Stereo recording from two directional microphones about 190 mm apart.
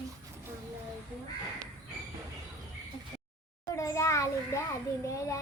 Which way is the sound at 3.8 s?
15° left (ahead or behind).